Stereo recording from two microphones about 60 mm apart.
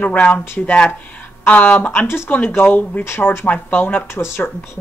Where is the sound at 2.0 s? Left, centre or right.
Left.